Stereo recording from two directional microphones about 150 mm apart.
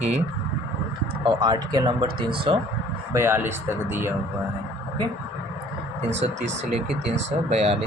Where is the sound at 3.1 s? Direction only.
15° right (ahead or behind).